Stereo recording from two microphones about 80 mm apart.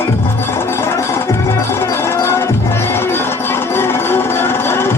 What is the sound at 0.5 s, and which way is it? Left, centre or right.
Music, left.